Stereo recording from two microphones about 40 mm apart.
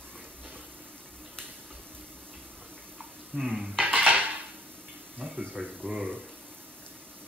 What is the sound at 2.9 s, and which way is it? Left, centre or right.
Bathtub, centre.